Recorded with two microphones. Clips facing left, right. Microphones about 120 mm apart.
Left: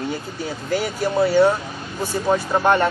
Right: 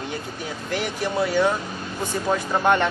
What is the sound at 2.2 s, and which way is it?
Speech, 10° left (ahead or behind).